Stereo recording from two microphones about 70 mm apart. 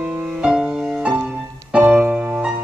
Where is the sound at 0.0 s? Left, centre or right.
Centre.